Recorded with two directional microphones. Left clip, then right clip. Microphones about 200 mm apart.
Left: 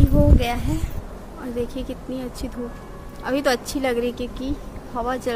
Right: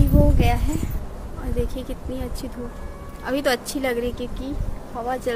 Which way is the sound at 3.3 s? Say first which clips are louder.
Left 1 dB; 5° left (ahead or behind).